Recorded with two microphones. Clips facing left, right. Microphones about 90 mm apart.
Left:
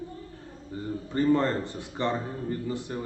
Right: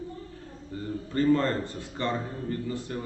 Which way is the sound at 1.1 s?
20° left (ahead or behind).